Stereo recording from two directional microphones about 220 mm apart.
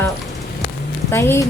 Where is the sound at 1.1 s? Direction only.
10° left (ahead or behind).